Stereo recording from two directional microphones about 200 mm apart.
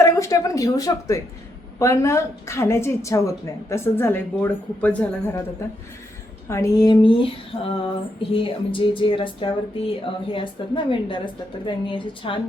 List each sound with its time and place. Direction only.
0.0 s speech: 15° left (ahead or behind)